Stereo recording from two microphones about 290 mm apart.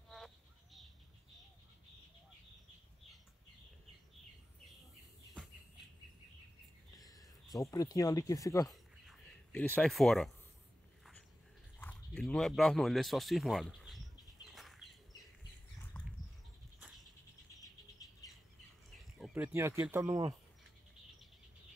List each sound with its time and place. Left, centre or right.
7.6 s speech: centre
9.0 s a sound: centre
11.8 s speech: centre
14.5 s bird: centre
16.8 s a sound: centre
19.1 s speech: centre